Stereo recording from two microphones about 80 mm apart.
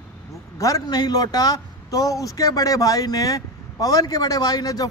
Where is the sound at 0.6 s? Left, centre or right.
Left.